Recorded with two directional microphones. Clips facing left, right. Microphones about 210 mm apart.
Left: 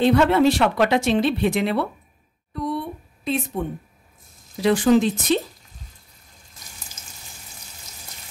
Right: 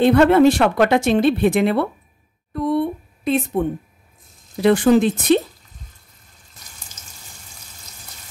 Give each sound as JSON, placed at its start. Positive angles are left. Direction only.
{"t": 0.0, "sound": "speech", "side_deg": -55}